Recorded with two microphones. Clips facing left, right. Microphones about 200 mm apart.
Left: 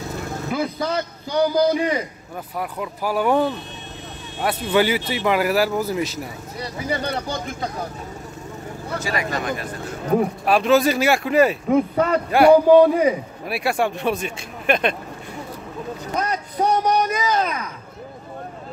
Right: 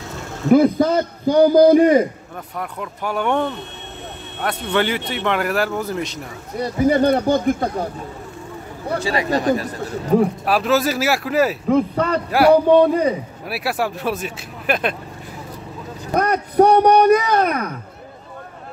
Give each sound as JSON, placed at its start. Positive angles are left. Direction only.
{"t": 0.5, "sound": "a man's voice", "side_deg": -50}
{"t": 2.5, "sound": "speech", "side_deg": 5}
{"t": 6.6, "sound": "a man's voice", "side_deg": -50}
{"t": 9.0, "sound": "speech", "side_deg": -30}
{"t": 10.1, "sound": "speech", "side_deg": 0}
{"t": 16.2, "sound": "a sound", "side_deg": -60}